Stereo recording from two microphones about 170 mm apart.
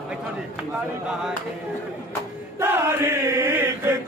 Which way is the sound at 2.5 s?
15° right (ahead or behind).